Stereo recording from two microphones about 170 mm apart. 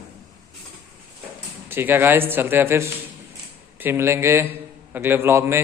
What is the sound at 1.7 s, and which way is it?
A man's voice, 10° right (ahead or behind).